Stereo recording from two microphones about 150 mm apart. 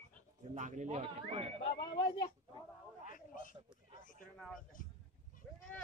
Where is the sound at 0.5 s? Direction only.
55° right (ahead or behind).